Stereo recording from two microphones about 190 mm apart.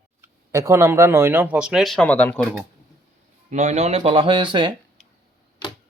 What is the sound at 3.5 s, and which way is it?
Speech, 35° right (ahead or behind).